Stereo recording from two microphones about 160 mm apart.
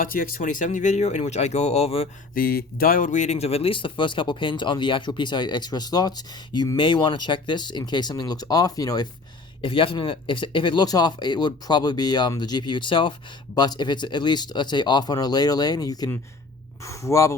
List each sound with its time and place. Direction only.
0.0 s speech: 60° left (ahead or behind); by 2.0 s 40° left (ahead or behind)
2.3 s speech: 70° left (ahead or behind); by 9.0 s 20° left (ahead or behind)
9.6 s speech: 35° left (ahead or behind)